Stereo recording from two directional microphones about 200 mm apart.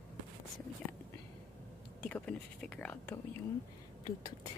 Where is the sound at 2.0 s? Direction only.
5° left (ahead or behind).